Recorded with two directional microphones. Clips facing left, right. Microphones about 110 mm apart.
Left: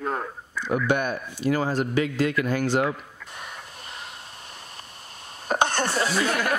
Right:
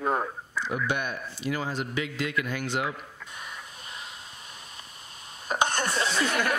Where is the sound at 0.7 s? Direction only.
50° left (ahead or behind); by 4.1 s 35° left (ahead or behind).